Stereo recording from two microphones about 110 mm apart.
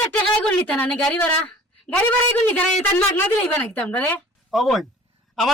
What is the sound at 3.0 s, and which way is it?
A woman's voice, 15° left (ahead or behind).